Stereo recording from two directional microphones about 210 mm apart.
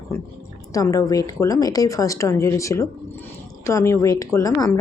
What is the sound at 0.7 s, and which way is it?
A woman's voice, 15° left (ahead or behind).